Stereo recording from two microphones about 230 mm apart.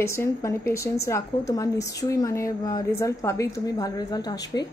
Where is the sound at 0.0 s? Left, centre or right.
Centre.